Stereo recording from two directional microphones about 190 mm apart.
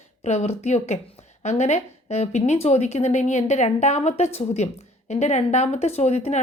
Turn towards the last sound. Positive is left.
turn(degrees=35)  # may be behind; listen again after turning